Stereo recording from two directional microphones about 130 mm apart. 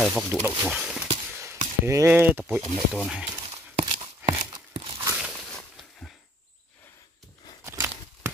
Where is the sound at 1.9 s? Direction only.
20° right (ahead or behind); by 3.3 s 5° right (ahead or behind).